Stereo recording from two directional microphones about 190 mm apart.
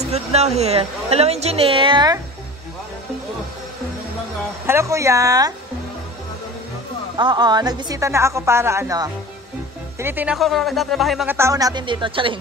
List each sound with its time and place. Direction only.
0.0 s a woman's voice: 35° right (ahead or behind)
4.6 s a woman's voice: 15° right (ahead or behind)
7.2 s a woman's voice: 20° right (ahead or behind); by 11.2 s centre (ahead or behind)
11.2 s a woman's voice: 15° right (ahead or behind)